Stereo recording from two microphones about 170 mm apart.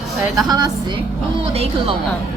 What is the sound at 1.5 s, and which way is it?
Speech, 35° right (ahead or behind).